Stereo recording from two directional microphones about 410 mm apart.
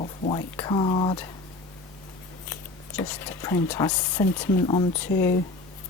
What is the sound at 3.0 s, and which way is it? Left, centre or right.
Speech, centre.